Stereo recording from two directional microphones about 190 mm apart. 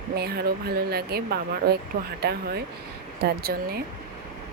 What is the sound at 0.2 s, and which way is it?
A woman's voice, 55° right (ahead or behind).